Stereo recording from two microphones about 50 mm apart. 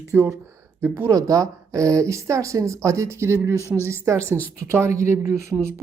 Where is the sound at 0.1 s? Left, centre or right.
Right.